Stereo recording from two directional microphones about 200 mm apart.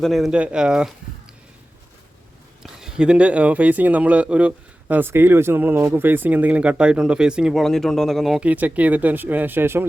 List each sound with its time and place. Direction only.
0.0 s speech: centre (ahead or behind)
2.6 s speech: 5° right (ahead or behind)